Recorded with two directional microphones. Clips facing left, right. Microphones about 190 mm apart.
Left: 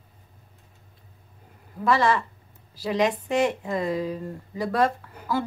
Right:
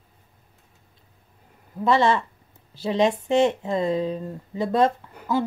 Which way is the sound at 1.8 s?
25° right (ahead or behind).